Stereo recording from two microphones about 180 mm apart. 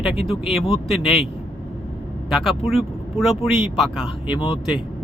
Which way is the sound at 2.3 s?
Centre (ahead or behind).